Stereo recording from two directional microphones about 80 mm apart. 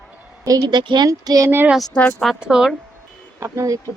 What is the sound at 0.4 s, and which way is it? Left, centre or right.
Speech, right.